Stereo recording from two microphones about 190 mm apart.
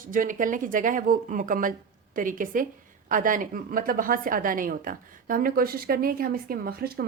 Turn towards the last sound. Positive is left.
turn(degrees=-55)  # may be behind; listen again after turning